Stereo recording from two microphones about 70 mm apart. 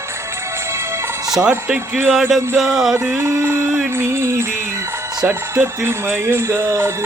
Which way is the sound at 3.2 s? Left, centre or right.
Right.